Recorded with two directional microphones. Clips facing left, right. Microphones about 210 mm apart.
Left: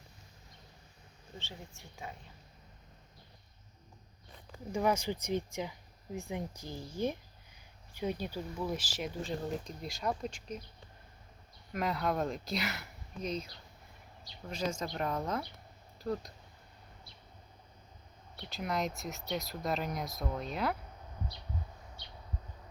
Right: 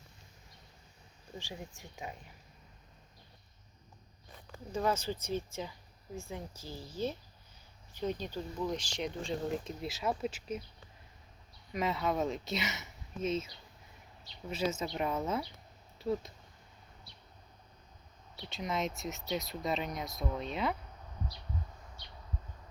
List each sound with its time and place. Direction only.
1.4 s speech: 15° right (ahead or behind)
4.7 s speech: 15° left (ahead or behind); by 10.6 s 5° right (ahead or behind)
11.7 s speech: centre (ahead or behind)
14.5 s speech: 5° right (ahead or behind)
18.4 s speech: centre (ahead or behind)